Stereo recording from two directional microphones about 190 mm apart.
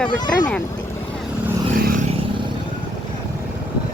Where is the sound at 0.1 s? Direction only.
20° left (ahead or behind).